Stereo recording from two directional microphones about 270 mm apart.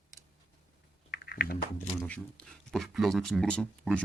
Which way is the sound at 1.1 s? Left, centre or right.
Left.